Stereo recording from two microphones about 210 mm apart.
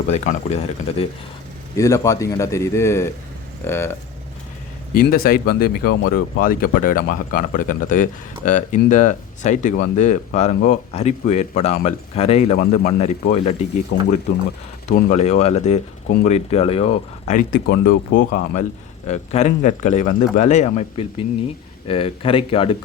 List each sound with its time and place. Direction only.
0.1 s speech: 30° left (ahead or behind)
1.7 s a man's voice: 15° left (ahead or behind)
4.9 s speech: 45° left (ahead or behind)
13.9 s speech: 55° left (ahead or behind)
14.8 s speech: 40° left (ahead or behind)